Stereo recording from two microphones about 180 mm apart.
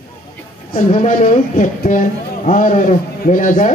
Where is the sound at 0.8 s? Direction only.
40° left (ahead or behind).